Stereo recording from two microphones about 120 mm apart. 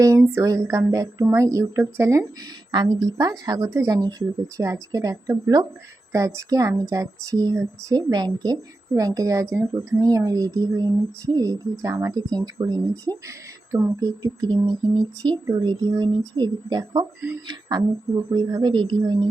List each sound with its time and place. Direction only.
0.3 s speech: 25° right (ahead or behind)
2.7 s speech: 35° right (ahead or behind)